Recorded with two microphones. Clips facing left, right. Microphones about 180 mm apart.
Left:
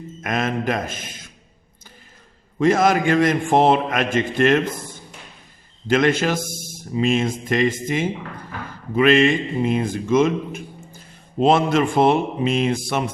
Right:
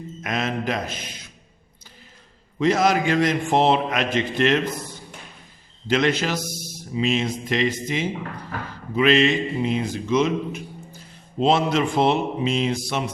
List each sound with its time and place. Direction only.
0.2 s a man's voice: 50° left (ahead or behind)
2.6 s a man's voice: 50° left (ahead or behind)